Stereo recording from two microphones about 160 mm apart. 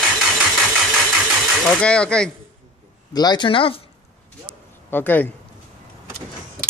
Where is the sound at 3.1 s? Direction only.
25° left (ahead or behind).